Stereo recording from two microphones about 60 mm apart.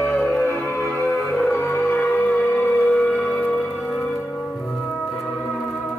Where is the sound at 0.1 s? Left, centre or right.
Left.